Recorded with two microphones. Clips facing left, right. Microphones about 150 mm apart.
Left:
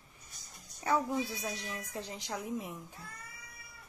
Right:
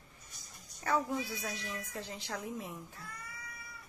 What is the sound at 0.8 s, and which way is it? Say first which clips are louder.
A woman's voice: left 2 dB; 20° left (ahead or behind).